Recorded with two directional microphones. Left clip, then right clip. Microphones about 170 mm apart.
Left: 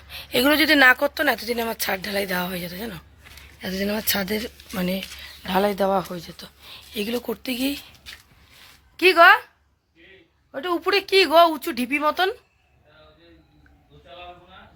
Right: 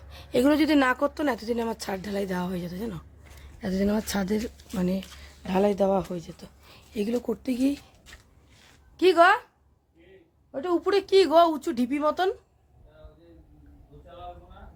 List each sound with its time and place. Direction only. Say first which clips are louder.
0.1 s a woman's voice: left 3 dB; 5° right (ahead or behind)
3.6 s speech: left 1 dB; 25° right (ahead or behind); by 4.5 s 10° right (ahead or behind)
4.7 s a woman's voice: left 4 dB; 5° left (ahead or behind)
9.0 s speech: left 5 dB; 10° left (ahead or behind)
10.5 s speech: left 2 dB; 5° left (ahead or behind)